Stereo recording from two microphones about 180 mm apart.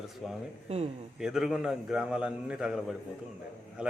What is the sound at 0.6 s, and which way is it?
Speech, 35° right (ahead or behind).